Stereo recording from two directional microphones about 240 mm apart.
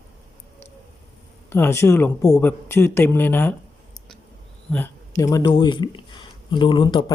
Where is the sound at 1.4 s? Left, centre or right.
Centre.